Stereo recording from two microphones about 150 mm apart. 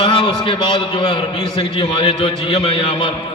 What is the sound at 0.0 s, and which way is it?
A man's voice, 30° left (ahead or behind).